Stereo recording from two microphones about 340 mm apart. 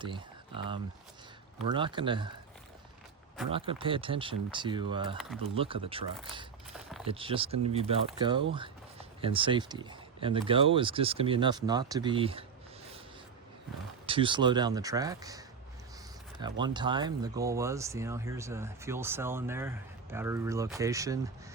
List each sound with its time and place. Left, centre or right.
0.0 s speech: centre
3.5 s speech: centre
14.1 s speech: centre